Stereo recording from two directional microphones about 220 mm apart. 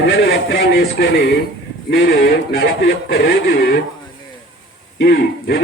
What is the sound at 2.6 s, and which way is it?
Speech, 55° left (ahead or behind).